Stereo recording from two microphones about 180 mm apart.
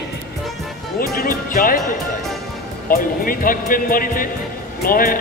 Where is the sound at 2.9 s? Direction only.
50° left (ahead or behind).